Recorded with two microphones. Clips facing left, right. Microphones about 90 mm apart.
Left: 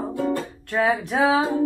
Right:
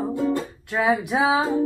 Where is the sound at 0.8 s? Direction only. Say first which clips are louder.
Even; 10° right (ahead or behind).